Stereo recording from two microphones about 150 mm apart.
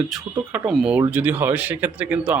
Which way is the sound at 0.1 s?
5° right (ahead or behind).